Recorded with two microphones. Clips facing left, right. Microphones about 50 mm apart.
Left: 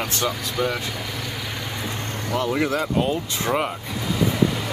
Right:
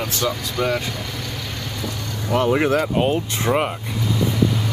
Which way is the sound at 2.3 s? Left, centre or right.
Right.